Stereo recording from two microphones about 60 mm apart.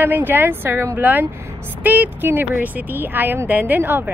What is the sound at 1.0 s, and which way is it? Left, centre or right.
A woman's voice, right.